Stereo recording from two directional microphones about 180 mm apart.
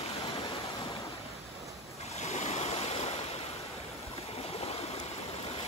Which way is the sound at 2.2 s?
35° left (ahead or behind).